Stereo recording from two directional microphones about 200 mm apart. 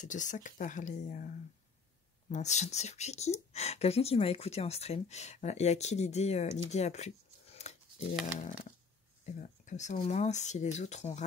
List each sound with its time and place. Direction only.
0.0 s speech: 40° left (ahead or behind)
9.2 s speech: 35° left (ahead or behind)